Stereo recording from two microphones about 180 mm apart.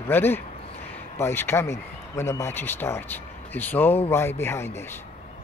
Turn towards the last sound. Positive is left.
turn(degrees=15)  # may be behind; listen again after turning